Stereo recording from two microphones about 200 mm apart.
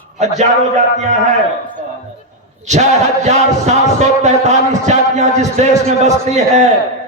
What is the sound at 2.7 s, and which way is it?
A man's voice, 35° right (ahead or behind).